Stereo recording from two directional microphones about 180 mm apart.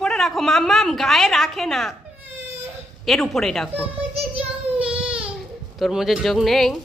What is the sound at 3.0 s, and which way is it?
Speech, centre (ahead or behind).